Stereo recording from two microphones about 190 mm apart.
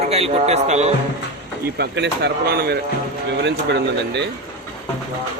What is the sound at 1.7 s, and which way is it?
Speech, 65° right (ahead or behind).